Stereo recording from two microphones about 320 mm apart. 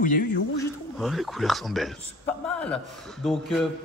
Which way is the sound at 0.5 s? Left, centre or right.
Centre.